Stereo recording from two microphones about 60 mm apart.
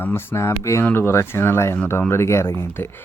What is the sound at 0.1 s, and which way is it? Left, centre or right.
Speech, left.